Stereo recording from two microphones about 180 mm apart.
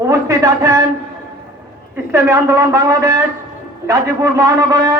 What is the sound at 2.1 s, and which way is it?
A man's voice, 15° right (ahead or behind).